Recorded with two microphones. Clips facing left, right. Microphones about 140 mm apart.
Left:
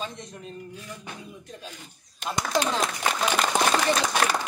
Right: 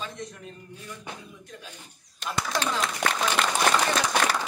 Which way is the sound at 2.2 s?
20° left (ahead or behind).